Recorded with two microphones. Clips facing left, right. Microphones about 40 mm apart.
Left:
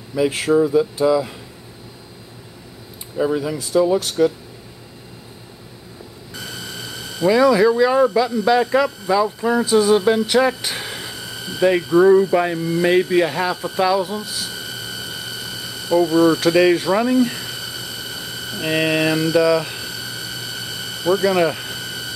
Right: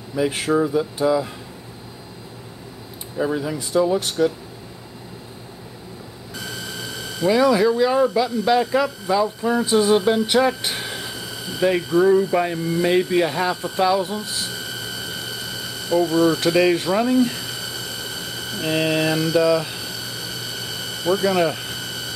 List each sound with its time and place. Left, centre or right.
0.3 s speech: centre
3.2 s speech: centre
3.7 s speech: centre
6.3 s speech: centre
9.7 s a sound: centre